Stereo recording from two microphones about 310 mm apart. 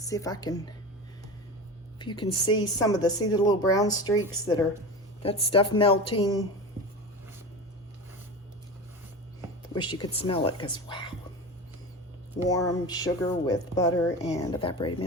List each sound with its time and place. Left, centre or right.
0.1 s speech: centre
2.0 s speech: centre
9.7 s speech: centre
12.5 s speech: centre